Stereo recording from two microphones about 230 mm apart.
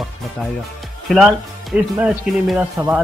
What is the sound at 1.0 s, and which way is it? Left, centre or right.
Speech, centre.